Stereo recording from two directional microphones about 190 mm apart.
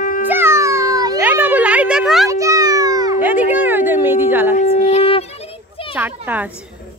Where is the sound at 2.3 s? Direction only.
15° right (ahead or behind).